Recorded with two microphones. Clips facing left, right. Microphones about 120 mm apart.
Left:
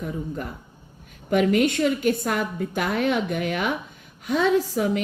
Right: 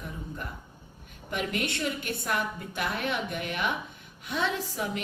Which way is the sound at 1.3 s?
45° left (ahead or behind).